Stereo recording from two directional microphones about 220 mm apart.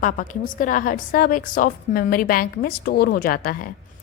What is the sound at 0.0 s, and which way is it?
A woman's voice, 40° left (ahead or behind).